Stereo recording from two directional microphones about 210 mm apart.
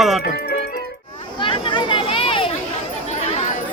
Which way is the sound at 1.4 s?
25° left (ahead or behind).